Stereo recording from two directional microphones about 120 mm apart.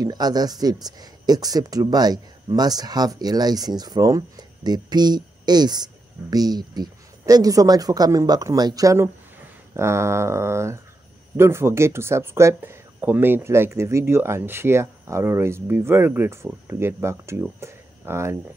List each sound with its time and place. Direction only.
0.0 s speech: 35° right (ahead or behind)